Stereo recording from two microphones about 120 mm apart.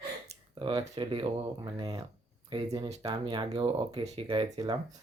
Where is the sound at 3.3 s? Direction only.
40° right (ahead or behind).